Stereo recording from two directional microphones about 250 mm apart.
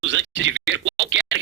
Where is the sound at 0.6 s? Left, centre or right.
Right.